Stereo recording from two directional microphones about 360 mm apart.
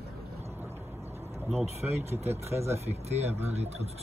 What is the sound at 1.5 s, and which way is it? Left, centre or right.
Speech, centre.